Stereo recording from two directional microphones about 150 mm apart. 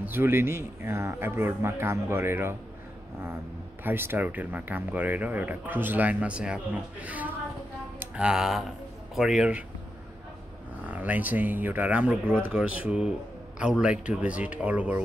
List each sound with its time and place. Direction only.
0.0 s speech: 15° right (ahead or behind)
3.8 s a man's voice: 15° right (ahead or behind)
10.9 s speech: 10° right (ahead or behind)